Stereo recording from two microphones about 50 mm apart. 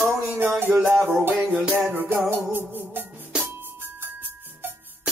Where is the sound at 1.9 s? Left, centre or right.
Right.